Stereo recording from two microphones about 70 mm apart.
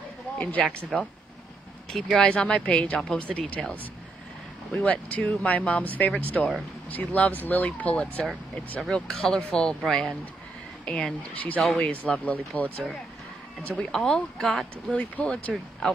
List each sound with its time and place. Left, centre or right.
0.4 s speech: left
0.9 s speech: centre
2.2 s a woman's voice: centre
4.8 s a woman's voice: centre
13.9 s a woman's voice: centre
14.9 s speech: centre